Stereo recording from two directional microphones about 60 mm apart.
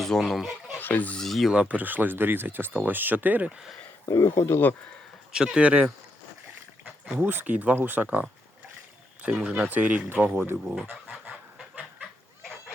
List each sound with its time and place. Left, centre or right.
0.0 s speech: centre
0.8 s speech: left
1.2 s speech: centre
1.5 s speech: right
4.0 s speech: left
5.3 s speech: centre
7.2 s speech: right
10.6 s speech: centre
11.1 s fowl: centre
12.4 s a sound: centre